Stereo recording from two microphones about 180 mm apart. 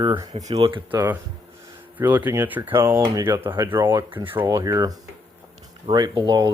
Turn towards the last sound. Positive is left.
turn(degrees=-25)  # may be behind; listen again after turning